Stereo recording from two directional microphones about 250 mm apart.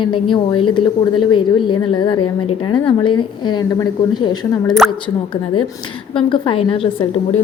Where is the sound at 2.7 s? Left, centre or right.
Centre.